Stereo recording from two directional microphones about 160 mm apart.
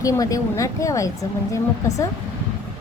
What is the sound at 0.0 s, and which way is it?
A woman's voice, 20° left (ahead or behind).